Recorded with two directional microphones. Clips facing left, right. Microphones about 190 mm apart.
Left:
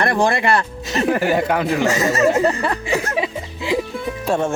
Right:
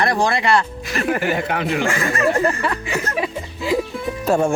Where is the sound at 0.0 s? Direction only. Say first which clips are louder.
Left 1 dB; 55° left (ahead or behind).